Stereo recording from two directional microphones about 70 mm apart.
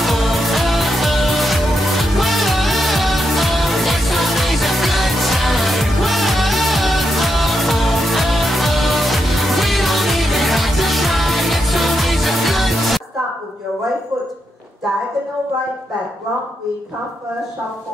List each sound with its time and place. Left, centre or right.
0.0 s music: centre